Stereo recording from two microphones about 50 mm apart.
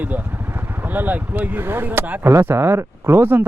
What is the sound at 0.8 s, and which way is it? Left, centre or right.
Speech, right.